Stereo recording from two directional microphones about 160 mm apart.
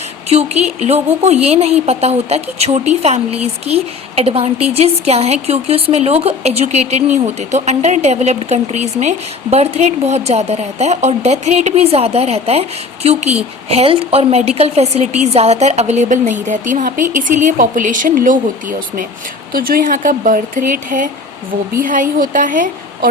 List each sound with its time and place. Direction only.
0.3 s a woman's voice: 40° right (ahead or behind)
19.5 s speech: 65° right (ahead or behind)